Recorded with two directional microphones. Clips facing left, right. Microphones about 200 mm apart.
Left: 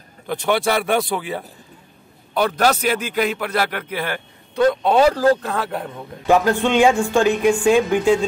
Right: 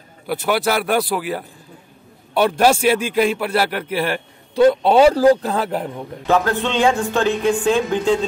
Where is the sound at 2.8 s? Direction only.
30° right (ahead or behind).